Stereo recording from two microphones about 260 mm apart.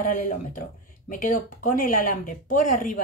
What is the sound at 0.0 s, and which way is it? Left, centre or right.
Speech, left.